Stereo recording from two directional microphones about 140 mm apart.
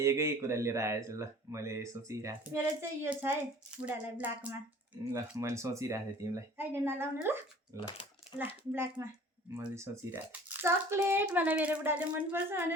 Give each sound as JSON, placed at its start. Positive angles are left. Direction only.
{"t": 0.0, "sound": "speech", "side_deg": -20}
{"t": 5.1, "sound": "a child's voice", "side_deg": -20}